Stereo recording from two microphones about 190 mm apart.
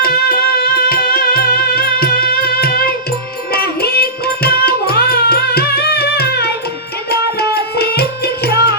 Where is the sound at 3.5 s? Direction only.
55° left (ahead or behind).